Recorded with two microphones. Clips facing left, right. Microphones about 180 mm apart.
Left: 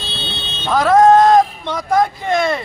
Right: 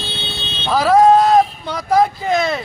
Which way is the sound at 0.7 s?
5° right (ahead or behind).